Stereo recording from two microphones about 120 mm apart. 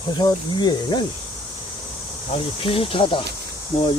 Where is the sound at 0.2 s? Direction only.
35° left (ahead or behind).